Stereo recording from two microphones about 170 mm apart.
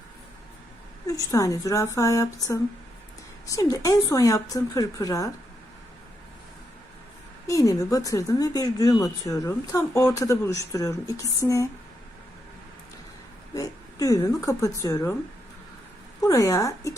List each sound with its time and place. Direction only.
1.0 s speech: 20° left (ahead or behind)
7.4 s speech: 20° left (ahead or behind)
13.5 s speech: 20° left (ahead or behind)
16.2 s speech: 20° left (ahead or behind)